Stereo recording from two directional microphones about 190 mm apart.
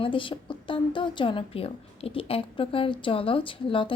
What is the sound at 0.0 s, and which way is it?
A woman's voice, 25° left (ahead or behind).